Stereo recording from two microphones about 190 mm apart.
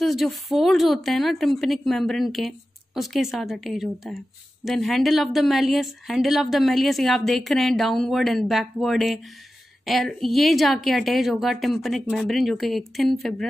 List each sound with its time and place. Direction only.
0.0 s a woman's voice: centre (ahead or behind)